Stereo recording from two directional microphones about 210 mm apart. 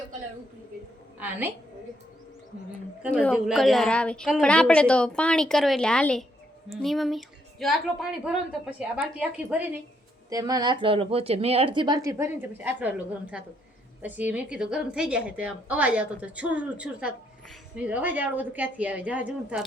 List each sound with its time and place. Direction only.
3.2 s a woman's voice: centre (ahead or behind)
10.2 s speech: 15° right (ahead or behind)
14.0 s a woman's voice: 10° right (ahead or behind)